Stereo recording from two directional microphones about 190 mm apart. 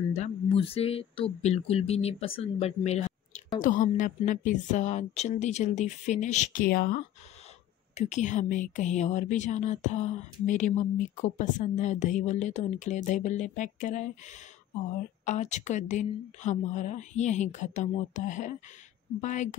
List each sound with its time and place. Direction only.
0.1 s speech: 35° left (ahead or behind); by 6.9 s 50° left (ahead or behind)
7.9 s speech: 35° left (ahead or behind)